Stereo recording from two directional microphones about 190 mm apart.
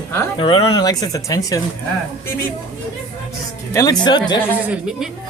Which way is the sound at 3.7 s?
20° left (ahead or behind).